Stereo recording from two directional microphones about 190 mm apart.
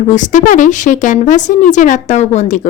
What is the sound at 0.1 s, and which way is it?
A woman's voice, 40° left (ahead or behind).